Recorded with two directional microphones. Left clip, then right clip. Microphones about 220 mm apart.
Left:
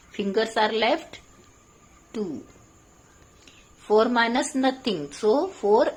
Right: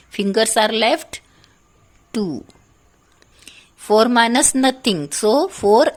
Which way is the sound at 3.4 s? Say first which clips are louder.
Right 8 dB; 50° right (ahead or behind).